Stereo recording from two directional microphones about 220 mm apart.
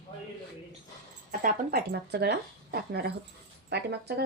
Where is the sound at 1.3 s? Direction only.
40° right (ahead or behind).